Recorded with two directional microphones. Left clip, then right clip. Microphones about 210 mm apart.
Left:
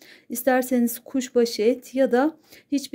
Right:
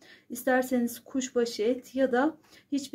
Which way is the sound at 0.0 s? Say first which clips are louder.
Left 7 dB; 40° left (ahead or behind).